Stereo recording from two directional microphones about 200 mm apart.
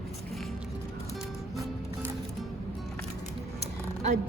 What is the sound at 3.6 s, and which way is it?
Music, 35° right (ahead or behind).